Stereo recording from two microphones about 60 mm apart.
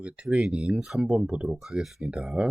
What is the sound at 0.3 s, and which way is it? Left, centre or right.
Speech, centre.